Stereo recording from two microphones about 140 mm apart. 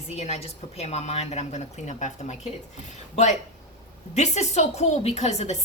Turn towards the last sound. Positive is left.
turn(degrees=50)  # may be behind; listen again after turning